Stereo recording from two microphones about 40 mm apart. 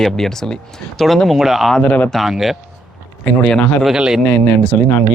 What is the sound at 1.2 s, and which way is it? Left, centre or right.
Speech, centre.